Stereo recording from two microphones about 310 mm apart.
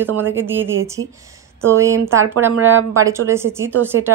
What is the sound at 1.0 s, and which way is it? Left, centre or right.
Speech, right.